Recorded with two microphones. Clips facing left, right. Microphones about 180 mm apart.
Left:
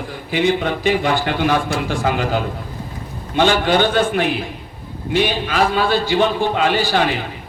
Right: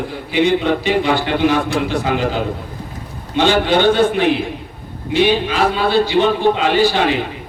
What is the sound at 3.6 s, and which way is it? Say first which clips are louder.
A man's voice: right 3 dB; 50° left (ahead or behind).